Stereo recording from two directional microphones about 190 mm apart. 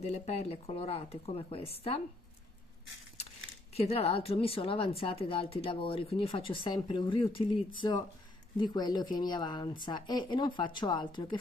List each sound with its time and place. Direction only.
0.0 s speech: 35° left (ahead or behind)
3.7 s a woman's voice: 30° left (ahead or behind)